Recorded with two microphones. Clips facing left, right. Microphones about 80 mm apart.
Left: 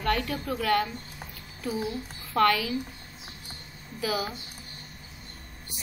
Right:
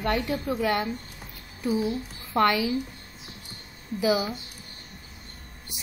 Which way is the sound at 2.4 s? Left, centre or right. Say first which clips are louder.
Right 1 dB; centre.